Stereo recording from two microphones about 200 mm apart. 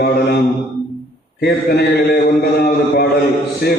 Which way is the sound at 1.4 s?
55° left (ahead or behind).